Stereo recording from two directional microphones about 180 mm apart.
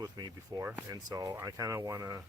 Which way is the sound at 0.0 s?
20° right (ahead or behind).